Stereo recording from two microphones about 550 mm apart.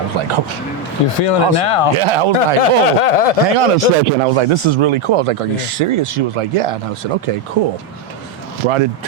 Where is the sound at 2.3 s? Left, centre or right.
Left.